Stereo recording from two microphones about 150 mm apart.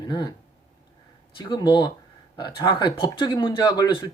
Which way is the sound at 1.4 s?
30° left (ahead or behind).